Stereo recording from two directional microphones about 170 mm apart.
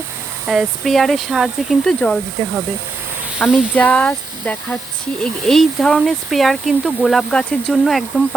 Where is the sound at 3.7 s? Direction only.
10° left (ahead or behind).